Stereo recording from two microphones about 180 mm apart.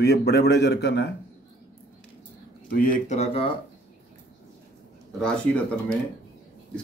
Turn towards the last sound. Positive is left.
turn(degrees=5)  # may be behind; listen again after turning